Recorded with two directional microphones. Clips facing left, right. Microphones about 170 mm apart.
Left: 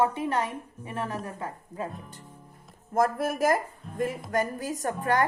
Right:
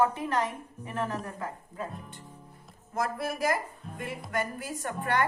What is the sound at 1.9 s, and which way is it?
Speech, centre (ahead or behind).